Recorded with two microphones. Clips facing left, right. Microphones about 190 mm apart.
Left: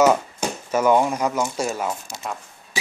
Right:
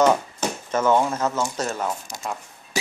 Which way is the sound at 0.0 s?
10° left (ahead or behind).